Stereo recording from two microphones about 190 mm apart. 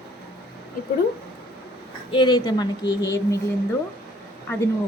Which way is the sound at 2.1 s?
25° left (ahead or behind).